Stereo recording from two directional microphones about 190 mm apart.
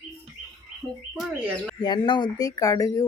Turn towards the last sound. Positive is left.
turn(degrees=20)  # may be behind; listen again after turning